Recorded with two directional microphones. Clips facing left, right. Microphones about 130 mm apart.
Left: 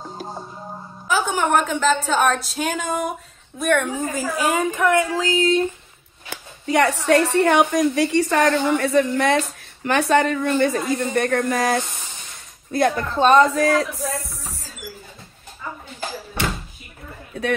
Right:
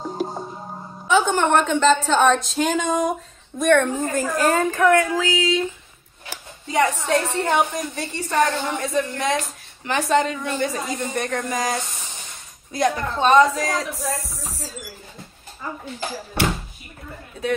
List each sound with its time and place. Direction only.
1.0 s a woman's voice: 5° left (ahead or behind)
4.9 s a sound: 25° left (ahead or behind)
5.2 s speech: 45° left (ahead or behind)
6.6 s a woman's voice: 65° left (ahead or behind)